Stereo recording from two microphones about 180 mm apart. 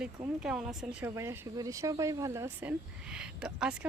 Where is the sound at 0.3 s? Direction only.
5° right (ahead or behind).